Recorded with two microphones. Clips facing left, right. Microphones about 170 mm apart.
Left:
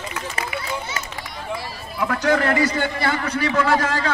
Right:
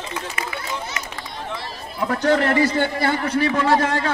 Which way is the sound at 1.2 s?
10° left (ahead or behind).